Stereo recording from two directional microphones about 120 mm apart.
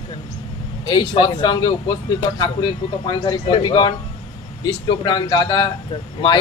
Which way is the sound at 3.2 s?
40° left (ahead or behind).